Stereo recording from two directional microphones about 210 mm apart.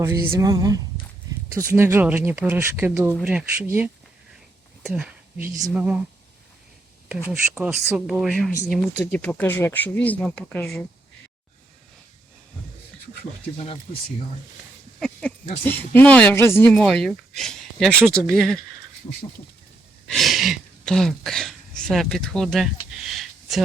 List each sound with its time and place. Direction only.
0.0 s speech: 15° right (ahead or behind)
4.8 s a sound: centre (ahead or behind)
5.5 s speech: 10° right (ahead or behind)
7.3 s speech: 10° right (ahead or behind)
14.9 s speech: 5° left (ahead or behind)
20.1 s speech: centre (ahead or behind)
23.0 s a sound: centre (ahead or behind)